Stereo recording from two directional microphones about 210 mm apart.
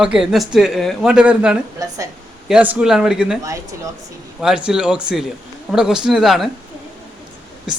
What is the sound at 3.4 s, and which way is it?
Speech, 15° right (ahead or behind).